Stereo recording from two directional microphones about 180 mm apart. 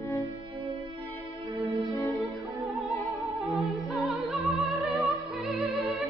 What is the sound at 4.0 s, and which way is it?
Music, centre (ahead or behind).